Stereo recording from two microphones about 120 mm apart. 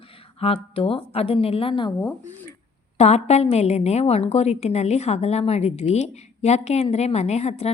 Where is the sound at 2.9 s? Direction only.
65° left (ahead or behind).